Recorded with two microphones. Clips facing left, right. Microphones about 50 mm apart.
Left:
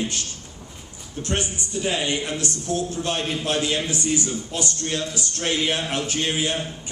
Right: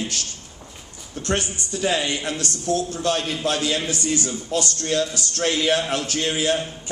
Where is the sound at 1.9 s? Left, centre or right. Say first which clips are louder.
Right 1 dB; left.